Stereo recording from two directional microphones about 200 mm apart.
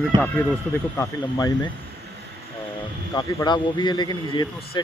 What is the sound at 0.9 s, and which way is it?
Speech, 15° left (ahead or behind).